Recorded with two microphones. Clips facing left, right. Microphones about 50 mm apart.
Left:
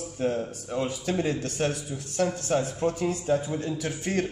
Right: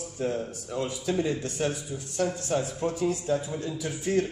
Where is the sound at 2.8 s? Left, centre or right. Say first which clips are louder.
Left 1 dB; left.